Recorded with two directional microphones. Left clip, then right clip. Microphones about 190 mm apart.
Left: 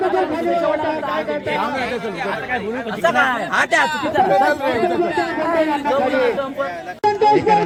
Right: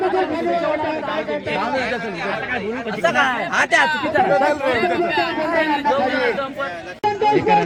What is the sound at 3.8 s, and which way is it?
Speech, 30° left (ahead or behind).